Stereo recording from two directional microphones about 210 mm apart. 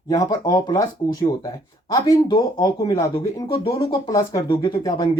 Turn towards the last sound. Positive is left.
turn(degrees=20)  # may be behind; listen again after turning